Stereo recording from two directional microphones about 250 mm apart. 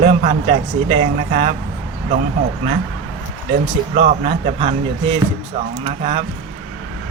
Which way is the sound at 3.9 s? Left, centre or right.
Right.